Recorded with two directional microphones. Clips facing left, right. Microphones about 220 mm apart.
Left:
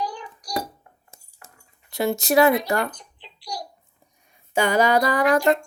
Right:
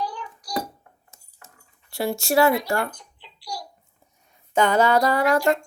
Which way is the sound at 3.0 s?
20° left (ahead or behind).